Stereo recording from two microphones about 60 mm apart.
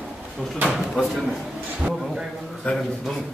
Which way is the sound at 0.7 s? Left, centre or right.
Centre.